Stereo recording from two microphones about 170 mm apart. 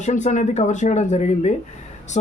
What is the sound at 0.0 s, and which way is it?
Speech, 45° left (ahead or behind).